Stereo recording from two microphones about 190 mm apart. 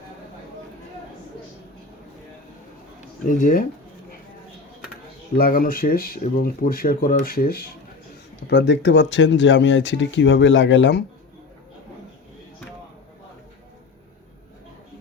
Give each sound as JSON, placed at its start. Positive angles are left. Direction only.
{"t": 3.2, "sound": "speech", "side_deg": 45}
{"t": 5.4, "sound": "speech", "side_deg": 50}
{"t": 8.4, "sound": "speech", "side_deg": 65}